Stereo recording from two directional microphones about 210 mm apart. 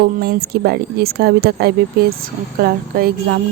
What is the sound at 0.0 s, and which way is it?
Speech, 50° right (ahead or behind).